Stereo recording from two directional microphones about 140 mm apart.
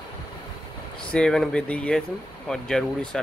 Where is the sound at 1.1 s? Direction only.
5° left (ahead or behind).